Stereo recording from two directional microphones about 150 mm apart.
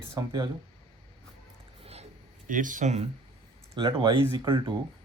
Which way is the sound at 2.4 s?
60° right (ahead or behind).